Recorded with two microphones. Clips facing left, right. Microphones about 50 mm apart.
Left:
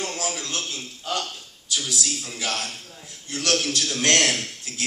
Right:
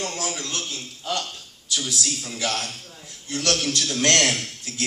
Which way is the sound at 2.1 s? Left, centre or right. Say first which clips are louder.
Right 2 dB; centre.